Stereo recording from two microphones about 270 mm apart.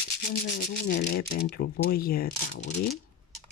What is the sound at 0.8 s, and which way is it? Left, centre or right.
Speech, left.